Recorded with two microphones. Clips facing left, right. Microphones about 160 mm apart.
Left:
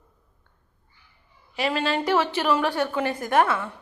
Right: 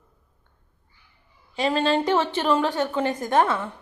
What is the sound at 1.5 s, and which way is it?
Speech, 25° right (ahead or behind).